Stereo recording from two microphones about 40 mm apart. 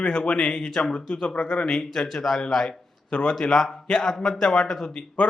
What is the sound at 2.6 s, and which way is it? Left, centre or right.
A man's voice, left.